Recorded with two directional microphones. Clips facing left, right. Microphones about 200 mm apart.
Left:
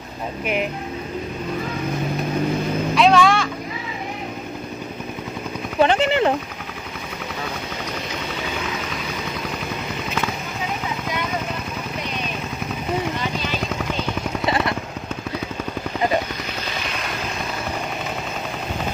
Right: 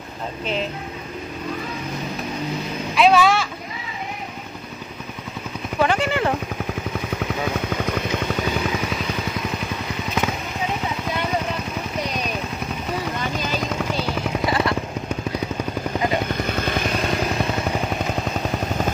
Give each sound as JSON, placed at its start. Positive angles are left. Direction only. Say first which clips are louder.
{"t": 3.0, "sound": "vehicle", "louder": "even", "side_deg": -5}
{"t": 5.8, "sound": "a sound", "louder": "left 3 dB", "side_deg": 25}
{"t": 14.4, "sound": "vehicle", "louder": "even", "side_deg": 25}